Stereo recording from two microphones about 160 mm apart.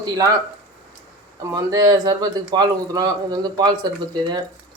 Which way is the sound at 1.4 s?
20° right (ahead or behind).